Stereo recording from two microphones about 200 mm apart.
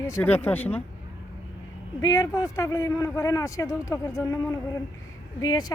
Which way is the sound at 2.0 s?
15° left (ahead or behind).